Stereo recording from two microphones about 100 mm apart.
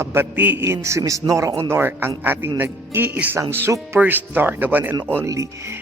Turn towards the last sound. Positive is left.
turn(degrees=-30)  # may be behind; listen again after turning